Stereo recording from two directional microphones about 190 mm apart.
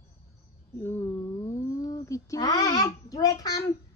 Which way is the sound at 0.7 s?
10° left (ahead or behind).